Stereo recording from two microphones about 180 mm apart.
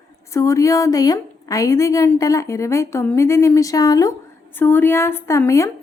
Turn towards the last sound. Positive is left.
turn(degrees=15)  # may be behind; listen again after turning